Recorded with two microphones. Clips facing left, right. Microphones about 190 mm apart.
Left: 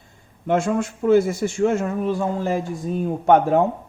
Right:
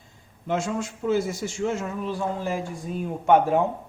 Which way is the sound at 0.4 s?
55° left (ahead or behind).